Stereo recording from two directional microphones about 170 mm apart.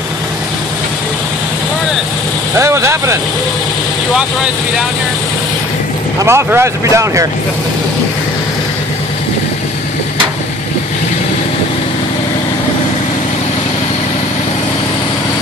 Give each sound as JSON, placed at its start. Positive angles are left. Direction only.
{"t": 2.6, "sound": "speech", "side_deg": -15}
{"t": 6.1, "sound": "speech", "side_deg": -15}